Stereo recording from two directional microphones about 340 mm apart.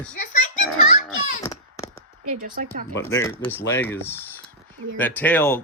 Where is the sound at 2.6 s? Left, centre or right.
Right.